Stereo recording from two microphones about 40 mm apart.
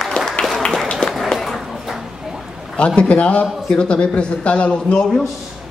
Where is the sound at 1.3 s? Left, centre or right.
Centre.